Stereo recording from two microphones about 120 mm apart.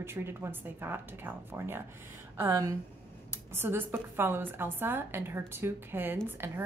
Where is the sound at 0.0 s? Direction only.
20° right (ahead or behind).